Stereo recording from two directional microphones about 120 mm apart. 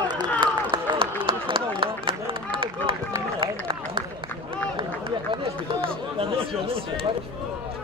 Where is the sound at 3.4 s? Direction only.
50° right (ahead or behind).